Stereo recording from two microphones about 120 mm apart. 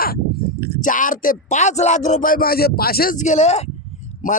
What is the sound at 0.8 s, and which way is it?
Speech, 90° left.